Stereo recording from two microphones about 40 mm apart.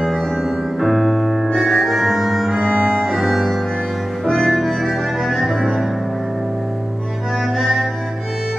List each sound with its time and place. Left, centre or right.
0.7 s music: centre
2.5 s music: right
3.1 s piano: centre
4.4 s music: centre
7.5 s music: centre